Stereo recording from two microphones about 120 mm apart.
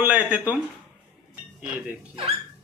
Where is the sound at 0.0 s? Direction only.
10° right (ahead or behind).